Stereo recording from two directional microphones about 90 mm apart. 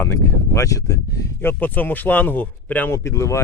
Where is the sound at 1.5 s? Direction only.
20° left (ahead or behind).